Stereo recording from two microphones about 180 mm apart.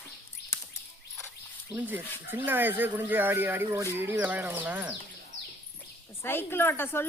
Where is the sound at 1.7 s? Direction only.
10° right (ahead or behind).